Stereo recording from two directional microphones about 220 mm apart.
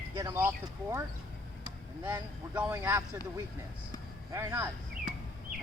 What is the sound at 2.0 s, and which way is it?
Speech, 10° right (ahead or behind).